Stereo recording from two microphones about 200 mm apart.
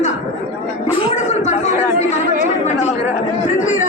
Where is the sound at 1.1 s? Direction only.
35° left (ahead or behind).